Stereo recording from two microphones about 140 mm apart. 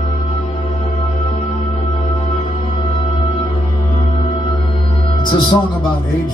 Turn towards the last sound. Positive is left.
turn(degrees=35)  # may be behind; listen again after turning